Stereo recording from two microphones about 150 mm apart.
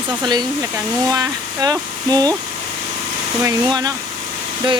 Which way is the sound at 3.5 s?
25° right (ahead or behind).